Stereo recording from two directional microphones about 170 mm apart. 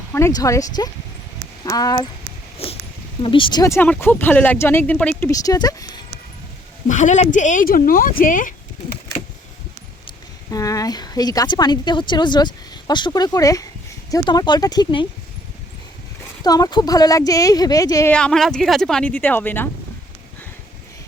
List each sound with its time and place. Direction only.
0.1 s a woman's voice: 15° left (ahead or behind)
2.6 s a woman's voice: 35° left (ahead or behind); by 5.3 s 10° left (ahead or behind)
5.3 s speech: 20° left (ahead or behind)
6.8 s speech: 45° left (ahead or behind)
10.5 s a woman's voice: 20° left (ahead or behind)
16.4 s a woman's voice: 25° left (ahead or behind)
18.1 s a woman's voice: 5° left (ahead or behind)